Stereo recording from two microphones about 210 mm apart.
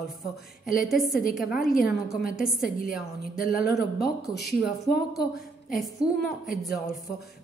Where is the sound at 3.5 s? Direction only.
45° left (ahead or behind).